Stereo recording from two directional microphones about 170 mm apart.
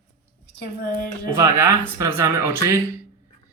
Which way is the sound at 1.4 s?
15° right (ahead or behind).